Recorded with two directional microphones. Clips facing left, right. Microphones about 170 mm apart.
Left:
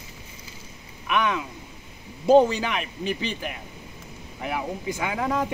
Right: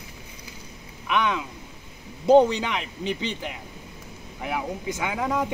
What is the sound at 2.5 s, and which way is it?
Speech, 20° right (ahead or behind).